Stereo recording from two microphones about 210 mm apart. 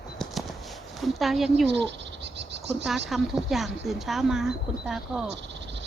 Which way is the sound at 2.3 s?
55° right (ahead or behind).